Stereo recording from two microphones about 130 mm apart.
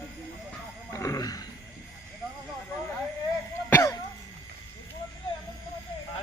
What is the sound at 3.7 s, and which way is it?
Cough, 20° left (ahead or behind).